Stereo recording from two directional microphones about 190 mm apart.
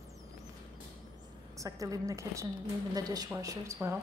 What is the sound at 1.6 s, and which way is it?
A woman's voice, 15° right (ahead or behind).